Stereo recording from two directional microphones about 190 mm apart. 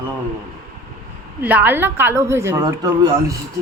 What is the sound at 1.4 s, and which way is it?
A woman's voice, 10° right (ahead or behind).